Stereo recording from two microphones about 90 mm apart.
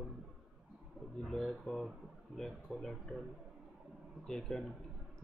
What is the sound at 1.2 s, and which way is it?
Speech, 5° left (ahead or behind).